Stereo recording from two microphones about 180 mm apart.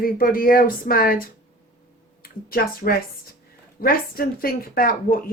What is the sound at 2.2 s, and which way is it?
Speech, 55° left (ahead or behind).